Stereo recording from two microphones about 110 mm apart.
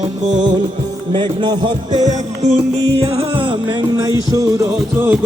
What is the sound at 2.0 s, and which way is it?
Music, 90° right.